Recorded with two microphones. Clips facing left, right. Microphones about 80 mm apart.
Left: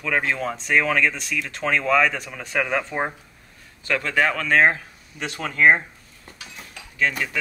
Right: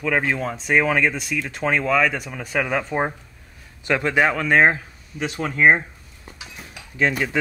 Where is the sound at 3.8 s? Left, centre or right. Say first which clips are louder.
Right 3 dB; centre.